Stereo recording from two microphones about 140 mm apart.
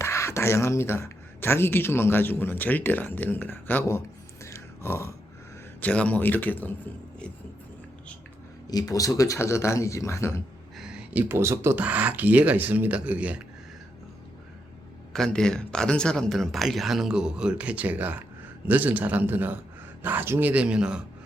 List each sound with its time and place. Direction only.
0.0 s speech: 20° left (ahead or behind)
4.4 s a sound: 20° left (ahead or behind)
5.8 s speech: 10° left (ahead or behind)
8.7 s speech: 25° left (ahead or behind)
10.8 s speech: 5° right (ahead or behind)
15.1 s a man's voice: 5° left (ahead or behind)